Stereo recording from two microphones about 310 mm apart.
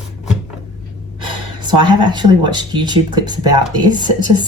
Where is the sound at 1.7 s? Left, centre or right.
Centre.